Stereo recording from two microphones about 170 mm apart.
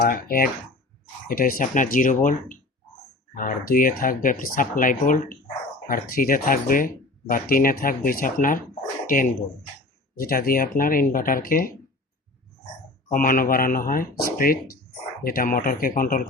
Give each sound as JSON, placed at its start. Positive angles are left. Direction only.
{"t": 0.0, "sound": "speech", "side_deg": 60}
{"t": 13.1, "sound": "speech", "side_deg": 55}